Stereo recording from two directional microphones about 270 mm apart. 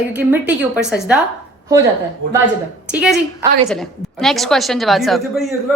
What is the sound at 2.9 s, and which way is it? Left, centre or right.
A woman's voice, centre.